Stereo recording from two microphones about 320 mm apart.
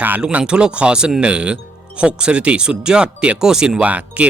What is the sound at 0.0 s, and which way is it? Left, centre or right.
Speech, centre.